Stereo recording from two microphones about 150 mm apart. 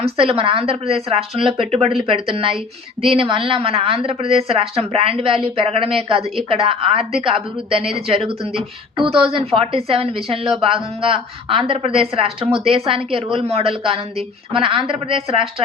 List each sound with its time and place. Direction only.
0.0 s a woman's voice: 40° right (ahead or behind)